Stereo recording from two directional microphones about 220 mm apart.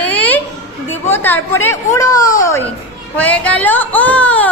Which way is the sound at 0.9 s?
10° left (ahead or behind).